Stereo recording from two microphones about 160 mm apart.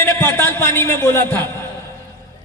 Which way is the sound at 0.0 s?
10° left (ahead or behind).